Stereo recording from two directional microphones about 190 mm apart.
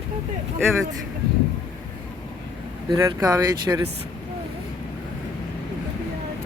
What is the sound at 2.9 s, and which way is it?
Speech, 20° right (ahead or behind).